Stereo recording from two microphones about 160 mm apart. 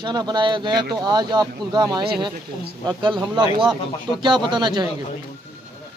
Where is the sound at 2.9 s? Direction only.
30° right (ahead or behind).